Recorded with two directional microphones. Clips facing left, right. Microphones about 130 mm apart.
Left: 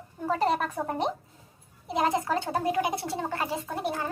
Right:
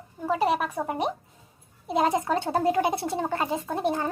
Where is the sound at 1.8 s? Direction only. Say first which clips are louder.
Right 3 dB; 25° right (ahead or behind).